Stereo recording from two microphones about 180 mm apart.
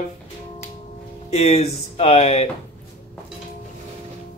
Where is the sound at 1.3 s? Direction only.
35° left (ahead or behind).